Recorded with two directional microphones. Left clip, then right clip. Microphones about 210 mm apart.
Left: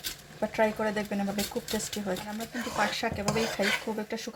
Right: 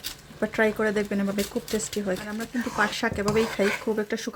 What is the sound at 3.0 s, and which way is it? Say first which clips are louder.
Speech: right 5 dB; 35° right (ahead or behind).